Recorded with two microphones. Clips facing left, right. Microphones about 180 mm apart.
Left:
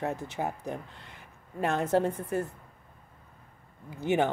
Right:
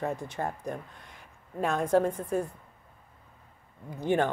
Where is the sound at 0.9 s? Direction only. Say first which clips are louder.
Left 1 dB; 65° left (ahead or behind).